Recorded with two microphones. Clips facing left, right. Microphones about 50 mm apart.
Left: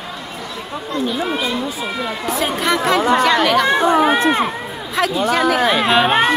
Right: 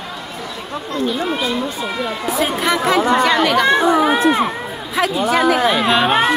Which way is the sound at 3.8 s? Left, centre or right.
Left.